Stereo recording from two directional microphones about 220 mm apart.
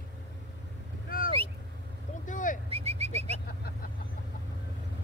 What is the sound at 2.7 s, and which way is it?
Vehicle, 30° right (ahead or behind).